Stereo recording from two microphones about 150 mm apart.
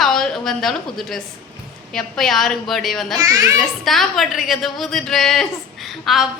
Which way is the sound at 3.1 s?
20° right (ahead or behind).